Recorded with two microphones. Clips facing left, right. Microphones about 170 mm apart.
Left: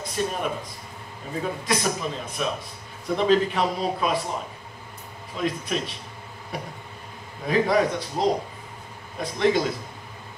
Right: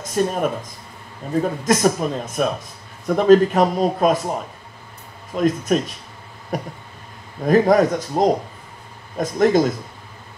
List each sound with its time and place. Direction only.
0.0 s speech: 45° right (ahead or behind)
5.3 s speech: 45° right (ahead or behind)